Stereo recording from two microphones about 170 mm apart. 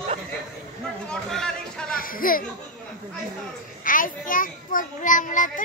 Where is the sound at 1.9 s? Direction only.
55° left (ahead or behind).